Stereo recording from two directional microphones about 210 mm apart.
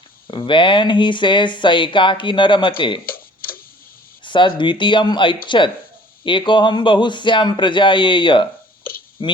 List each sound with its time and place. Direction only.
0.3 s speech: 25° left (ahead or behind)
3.1 s tick-tock: 45° left (ahead or behind)
4.2 s speech: 25° left (ahead or behind)